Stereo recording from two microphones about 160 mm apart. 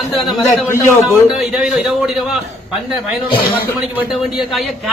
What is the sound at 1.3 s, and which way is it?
Speech, 5° right (ahead or behind).